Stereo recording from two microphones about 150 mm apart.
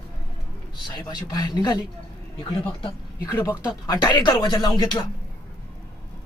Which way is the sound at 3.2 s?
20° left (ahead or behind).